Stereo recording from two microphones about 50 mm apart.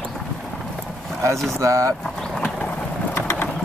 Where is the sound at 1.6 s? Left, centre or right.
Right.